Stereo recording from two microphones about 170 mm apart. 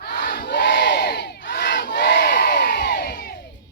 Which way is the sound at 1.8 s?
65° left (ahead or behind).